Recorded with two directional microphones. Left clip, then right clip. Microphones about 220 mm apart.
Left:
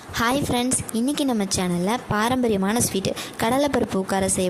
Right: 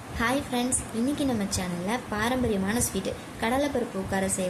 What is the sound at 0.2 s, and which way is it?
A woman's voice, 45° left (ahead or behind).